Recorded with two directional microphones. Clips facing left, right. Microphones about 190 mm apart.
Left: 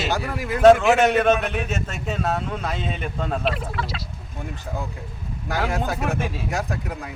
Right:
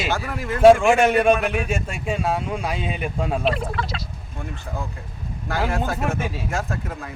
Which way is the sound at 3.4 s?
5° left (ahead or behind).